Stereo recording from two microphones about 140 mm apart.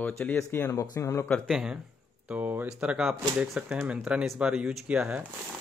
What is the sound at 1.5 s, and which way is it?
Speech, 5° right (ahead or behind).